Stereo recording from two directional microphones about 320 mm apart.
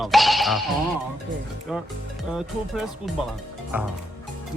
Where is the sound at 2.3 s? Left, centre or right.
Centre.